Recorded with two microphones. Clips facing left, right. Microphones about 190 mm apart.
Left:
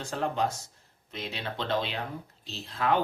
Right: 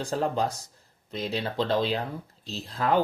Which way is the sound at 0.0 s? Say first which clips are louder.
Right 3 dB; 35° right (ahead or behind).